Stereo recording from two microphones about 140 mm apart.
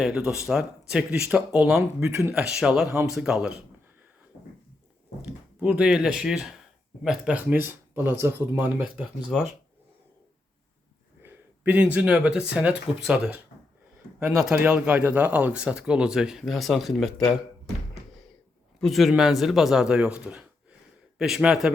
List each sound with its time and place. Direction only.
0.0 s speech: 5° right (ahead or behind)
5.2 s speech: 10° right (ahead or behind)
9.0 s speech: centre (ahead or behind)
11.2 s speech: 15° right (ahead or behind)
18.8 s speech: centre (ahead or behind)